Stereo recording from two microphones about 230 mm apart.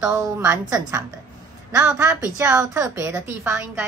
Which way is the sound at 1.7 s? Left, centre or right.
Centre.